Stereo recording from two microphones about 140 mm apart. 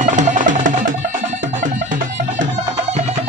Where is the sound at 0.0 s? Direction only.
60° right (ahead or behind).